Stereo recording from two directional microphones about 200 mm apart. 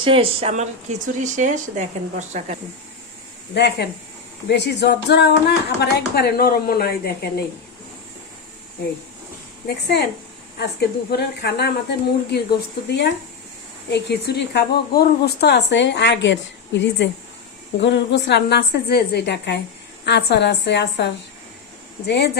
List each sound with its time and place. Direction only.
0.0 s speech: 25° right (ahead or behind)
3.5 s a woman's voice: 55° left (ahead or behind)
9.6 s a woman's voice: 55° left (ahead or behind)
13.9 s a woman's voice: 55° left (ahead or behind)